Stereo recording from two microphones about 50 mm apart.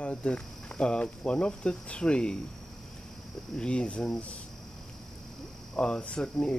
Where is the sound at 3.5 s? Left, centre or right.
Left.